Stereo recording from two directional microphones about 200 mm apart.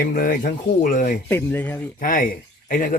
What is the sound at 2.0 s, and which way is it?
Speech, 45° left (ahead or behind).